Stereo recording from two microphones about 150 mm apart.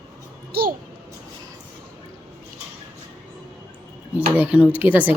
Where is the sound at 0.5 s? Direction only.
85° right.